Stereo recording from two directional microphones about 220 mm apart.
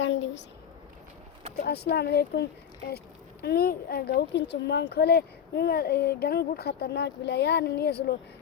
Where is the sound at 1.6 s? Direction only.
45° left (ahead or behind).